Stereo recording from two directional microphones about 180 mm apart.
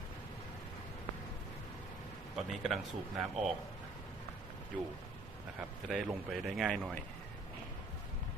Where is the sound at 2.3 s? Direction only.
Centre (ahead or behind).